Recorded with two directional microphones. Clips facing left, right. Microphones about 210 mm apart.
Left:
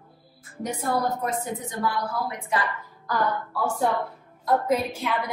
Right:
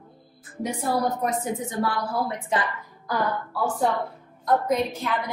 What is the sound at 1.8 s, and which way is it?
Speech, 25° right (ahead or behind).